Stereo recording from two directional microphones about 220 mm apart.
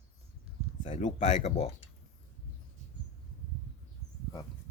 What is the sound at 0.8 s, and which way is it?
Speech, 30° left (ahead or behind).